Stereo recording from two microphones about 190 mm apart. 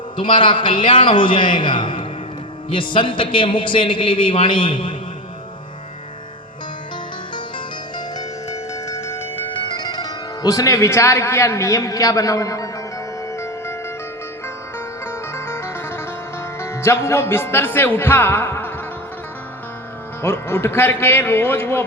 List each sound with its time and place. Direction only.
0.2 s a man's voice: 25° left (ahead or behind)
7.9 s music: 20° left (ahead or behind)
9.8 s speech: 20° left (ahead or behind)
13.3 s music: 15° left (ahead or behind)
15.0 s music: 15° left (ahead or behind)
16.6 s speech: 15° left (ahead or behind)
20.2 s speech: 15° left (ahead or behind)